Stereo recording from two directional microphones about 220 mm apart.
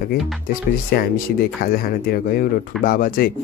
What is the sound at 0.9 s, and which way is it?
Speech, 45° left (ahead or behind).